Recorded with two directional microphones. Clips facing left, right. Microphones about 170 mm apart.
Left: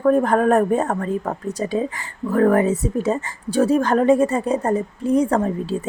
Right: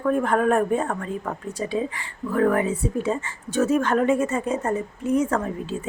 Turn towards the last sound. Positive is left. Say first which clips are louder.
# left 5 dB
turn(degrees=35)  # may be behind; listen again after turning